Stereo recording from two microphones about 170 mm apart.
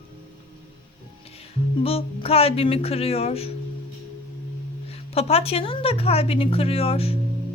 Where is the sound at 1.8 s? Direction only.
35° left (ahead or behind).